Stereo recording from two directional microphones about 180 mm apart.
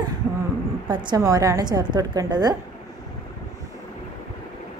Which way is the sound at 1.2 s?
20° right (ahead or behind).